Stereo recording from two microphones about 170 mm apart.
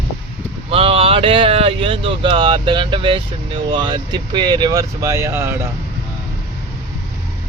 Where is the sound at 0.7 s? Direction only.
35° right (ahead or behind); by 5.6 s 15° right (ahead or behind).